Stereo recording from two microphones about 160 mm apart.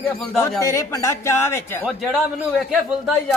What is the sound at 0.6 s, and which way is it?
Speech, 20° left (ahead or behind).